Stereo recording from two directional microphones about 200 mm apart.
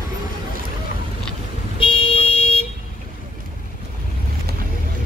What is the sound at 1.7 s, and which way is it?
Car alarm, 25° left (ahead or behind).